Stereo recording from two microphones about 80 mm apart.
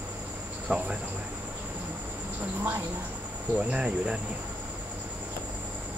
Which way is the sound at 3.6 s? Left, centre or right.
Centre.